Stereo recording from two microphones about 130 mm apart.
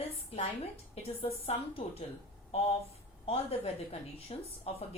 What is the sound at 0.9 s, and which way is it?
A woman's voice, 50° left (ahead or behind).